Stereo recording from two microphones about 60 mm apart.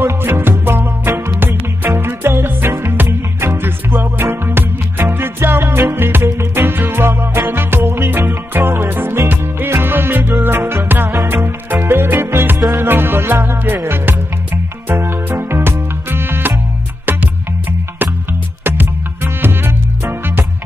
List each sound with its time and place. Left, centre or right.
0.0 s music: right